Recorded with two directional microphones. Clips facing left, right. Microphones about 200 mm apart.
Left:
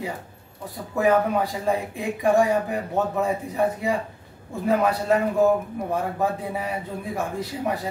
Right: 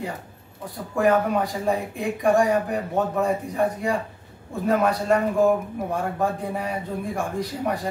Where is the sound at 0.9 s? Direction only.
5° left (ahead or behind).